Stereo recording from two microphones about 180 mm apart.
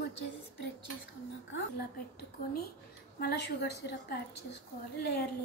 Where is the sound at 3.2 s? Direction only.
65° left (ahead or behind).